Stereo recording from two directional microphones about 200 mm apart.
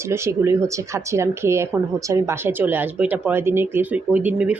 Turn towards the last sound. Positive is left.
turn(degrees=-5)  # may be behind; listen again after turning